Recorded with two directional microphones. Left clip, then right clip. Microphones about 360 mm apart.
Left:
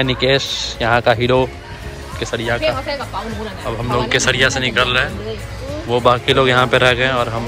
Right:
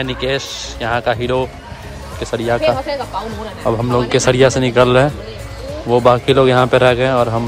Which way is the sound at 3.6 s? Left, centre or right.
Centre.